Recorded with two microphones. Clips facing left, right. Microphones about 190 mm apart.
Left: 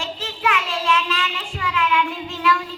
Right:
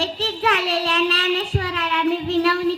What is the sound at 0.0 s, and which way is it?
Child singing, 35° right (ahead or behind).